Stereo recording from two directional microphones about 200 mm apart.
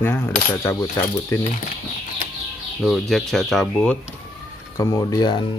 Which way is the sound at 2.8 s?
Centre (ahead or behind).